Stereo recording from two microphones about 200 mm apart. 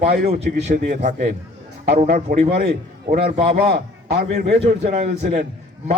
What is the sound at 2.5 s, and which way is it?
A man's voice, 50° right (ahead or behind).